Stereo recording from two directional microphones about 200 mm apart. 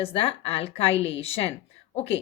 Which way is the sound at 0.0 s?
30° left (ahead or behind).